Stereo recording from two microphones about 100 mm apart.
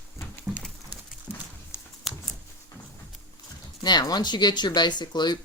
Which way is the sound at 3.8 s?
45° left (ahead or behind).